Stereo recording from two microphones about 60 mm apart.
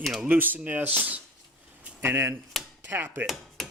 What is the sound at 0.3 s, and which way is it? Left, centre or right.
Speech, right.